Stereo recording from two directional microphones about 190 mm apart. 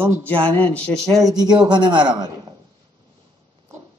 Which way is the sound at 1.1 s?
20° right (ahead or behind).